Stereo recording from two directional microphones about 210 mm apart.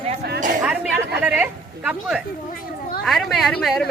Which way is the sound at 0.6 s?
5° right (ahead or behind).